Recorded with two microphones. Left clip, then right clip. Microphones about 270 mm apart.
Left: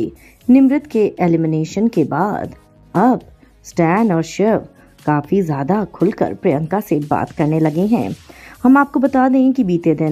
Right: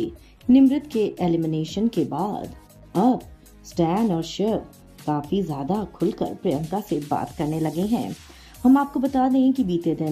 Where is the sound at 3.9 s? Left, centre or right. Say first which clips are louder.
Left 9 dB; left.